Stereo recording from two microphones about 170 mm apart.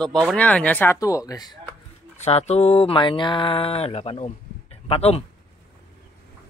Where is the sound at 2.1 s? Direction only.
40° left (ahead or behind).